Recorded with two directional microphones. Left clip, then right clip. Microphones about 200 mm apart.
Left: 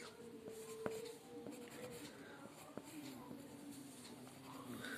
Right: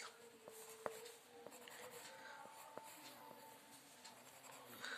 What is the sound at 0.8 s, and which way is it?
Music, 5° right (ahead or behind).